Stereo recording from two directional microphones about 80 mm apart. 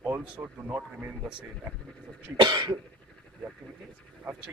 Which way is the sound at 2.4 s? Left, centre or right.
Right.